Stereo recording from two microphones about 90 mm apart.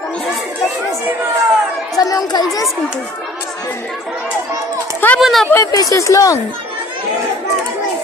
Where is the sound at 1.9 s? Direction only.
45° left (ahead or behind).